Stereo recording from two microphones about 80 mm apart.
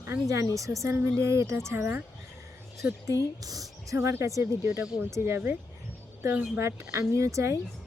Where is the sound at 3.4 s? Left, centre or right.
Right.